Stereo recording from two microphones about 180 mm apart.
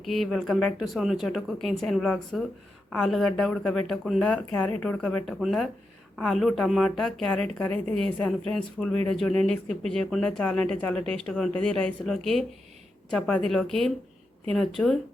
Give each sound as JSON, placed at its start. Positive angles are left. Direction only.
{"t": 0.0, "sound": "speech", "side_deg": 0}